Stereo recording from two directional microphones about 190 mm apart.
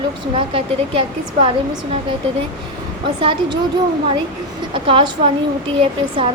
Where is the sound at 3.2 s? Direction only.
25° right (ahead or behind).